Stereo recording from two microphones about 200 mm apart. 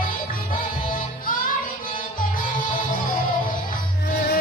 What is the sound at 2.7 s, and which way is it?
Music, 45° left (ahead or behind).